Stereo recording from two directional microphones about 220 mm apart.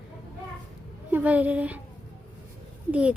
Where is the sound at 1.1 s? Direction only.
5° right (ahead or behind).